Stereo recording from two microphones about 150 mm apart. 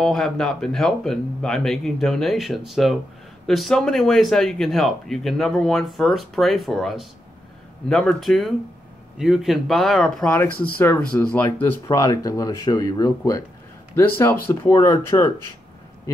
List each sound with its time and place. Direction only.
0.0 s speech: 5° left (ahead or behind); by 15.2 s 20° left (ahead or behind)